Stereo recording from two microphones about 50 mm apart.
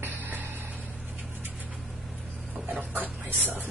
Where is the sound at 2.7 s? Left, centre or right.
Right.